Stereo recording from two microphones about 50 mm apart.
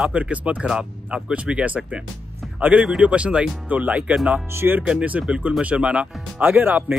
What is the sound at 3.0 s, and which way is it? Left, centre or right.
Speech, right.